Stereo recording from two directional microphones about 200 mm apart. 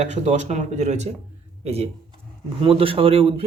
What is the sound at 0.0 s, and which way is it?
Speech, 35° right (ahead or behind).